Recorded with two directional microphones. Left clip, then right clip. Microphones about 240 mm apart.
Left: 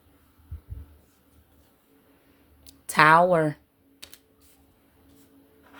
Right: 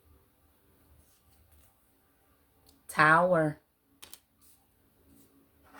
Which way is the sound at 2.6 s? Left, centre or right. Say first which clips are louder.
Left 6 dB; left.